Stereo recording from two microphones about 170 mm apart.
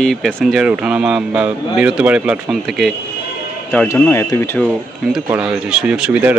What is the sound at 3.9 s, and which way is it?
Speech, 15° left (ahead or behind).